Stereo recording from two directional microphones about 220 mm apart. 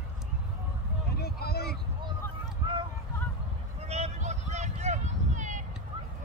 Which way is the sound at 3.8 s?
30° right (ahead or behind).